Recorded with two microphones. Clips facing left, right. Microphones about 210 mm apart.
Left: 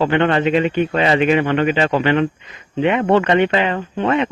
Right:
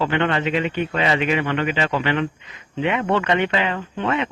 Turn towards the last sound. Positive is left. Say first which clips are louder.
# left 5 dB
turn(degrees=40)  # may be behind; listen again after turning